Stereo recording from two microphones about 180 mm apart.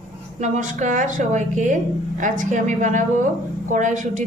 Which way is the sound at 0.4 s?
45° right (ahead or behind).